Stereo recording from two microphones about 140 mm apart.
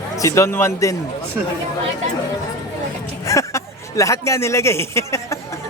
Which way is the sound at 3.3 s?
20° left (ahead or behind).